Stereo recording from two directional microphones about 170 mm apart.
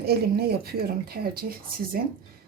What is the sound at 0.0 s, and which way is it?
Speech, 65° right (ahead or behind).